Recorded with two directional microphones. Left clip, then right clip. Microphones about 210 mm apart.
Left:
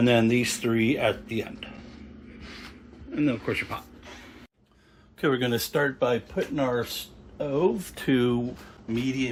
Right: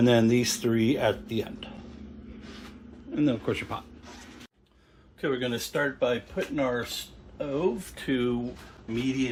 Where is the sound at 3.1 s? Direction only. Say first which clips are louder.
Left 1 dB; 10° right (ahead or behind).